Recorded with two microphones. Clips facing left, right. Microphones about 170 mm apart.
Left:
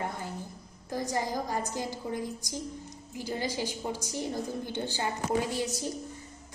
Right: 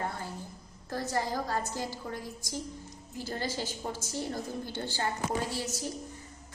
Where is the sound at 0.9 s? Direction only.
15° left (ahead or behind).